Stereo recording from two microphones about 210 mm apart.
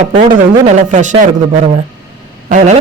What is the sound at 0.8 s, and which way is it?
A woman's voice, 35° right (ahead or behind).